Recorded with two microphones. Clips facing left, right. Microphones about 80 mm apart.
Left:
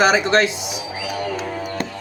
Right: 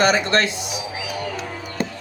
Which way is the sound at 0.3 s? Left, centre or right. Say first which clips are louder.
Left 3 dB; centre.